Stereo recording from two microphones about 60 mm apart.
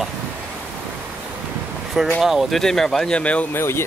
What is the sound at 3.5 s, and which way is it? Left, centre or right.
Speech, left.